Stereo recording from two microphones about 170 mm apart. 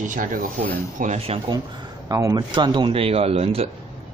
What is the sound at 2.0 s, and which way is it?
Speech, 20° right (ahead or behind).